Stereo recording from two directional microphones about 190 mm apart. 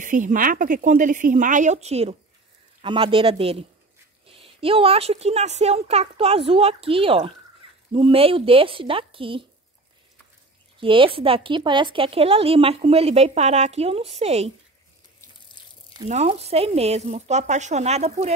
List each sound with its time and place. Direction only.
0.0 s a woman's voice: 45° right (ahead or behind); by 9.4 s 30° right (ahead or behind)
10.8 s speech: 25° right (ahead or behind)
15.6 s a sound: 25° left (ahead or behind)
16.1 s speech: 35° right (ahead or behind)